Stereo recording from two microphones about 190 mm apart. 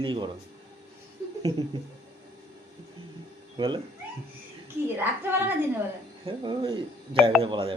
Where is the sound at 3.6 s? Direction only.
25° right (ahead or behind).